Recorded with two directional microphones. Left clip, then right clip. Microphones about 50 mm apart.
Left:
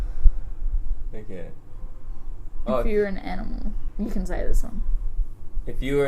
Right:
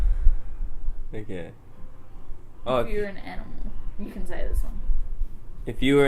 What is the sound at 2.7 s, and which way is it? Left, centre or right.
A woman's voice, left.